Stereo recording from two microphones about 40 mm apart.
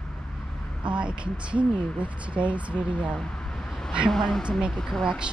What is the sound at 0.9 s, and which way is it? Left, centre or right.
Speech, right.